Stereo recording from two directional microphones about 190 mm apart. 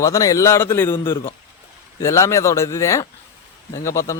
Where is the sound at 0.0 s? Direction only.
15° left (ahead or behind).